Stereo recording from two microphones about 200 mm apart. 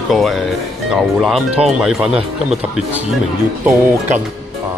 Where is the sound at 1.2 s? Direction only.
Centre (ahead or behind).